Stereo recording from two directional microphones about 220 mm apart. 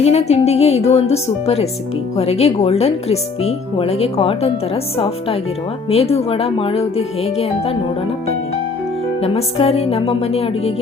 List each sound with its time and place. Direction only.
0.0 s speech: 30° left (ahead or behind)
9.2 s speech: 25° left (ahead or behind)